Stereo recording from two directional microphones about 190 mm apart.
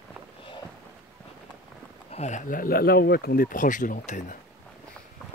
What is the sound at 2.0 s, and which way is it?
Speech, 35° left (ahead or behind).